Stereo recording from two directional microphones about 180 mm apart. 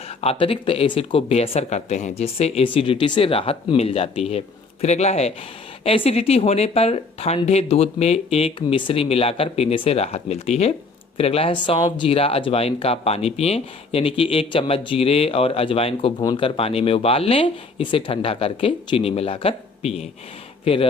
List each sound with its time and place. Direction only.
0.2 s speech: 30° left (ahead or behind)